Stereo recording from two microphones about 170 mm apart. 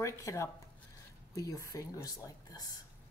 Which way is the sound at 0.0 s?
20° left (ahead or behind).